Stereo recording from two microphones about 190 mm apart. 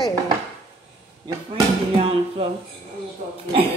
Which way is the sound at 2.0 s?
30° right (ahead or behind).